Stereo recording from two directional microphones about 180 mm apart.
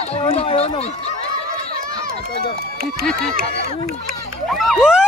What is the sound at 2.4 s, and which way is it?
Speech, 60° right (ahead or behind).